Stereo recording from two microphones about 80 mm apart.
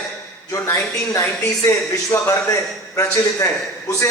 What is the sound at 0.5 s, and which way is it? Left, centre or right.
Speech, left.